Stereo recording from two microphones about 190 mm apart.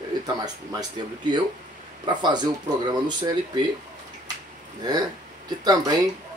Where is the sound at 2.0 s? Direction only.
25° right (ahead or behind).